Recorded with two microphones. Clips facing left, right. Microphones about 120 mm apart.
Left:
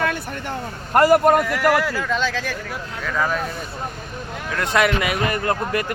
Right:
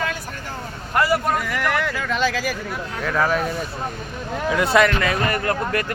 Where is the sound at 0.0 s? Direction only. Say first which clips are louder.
Left 3 dB; 60° left (ahead or behind).